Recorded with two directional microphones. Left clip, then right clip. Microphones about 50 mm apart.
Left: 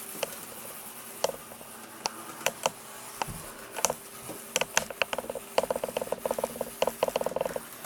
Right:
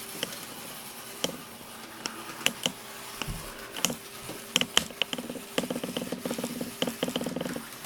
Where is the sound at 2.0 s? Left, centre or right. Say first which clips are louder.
Left 3 dB; right.